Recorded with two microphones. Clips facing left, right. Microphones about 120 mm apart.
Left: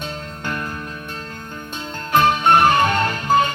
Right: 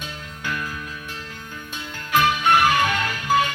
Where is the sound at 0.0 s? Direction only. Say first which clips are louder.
Left 4 dB; 50° left (ahead or behind).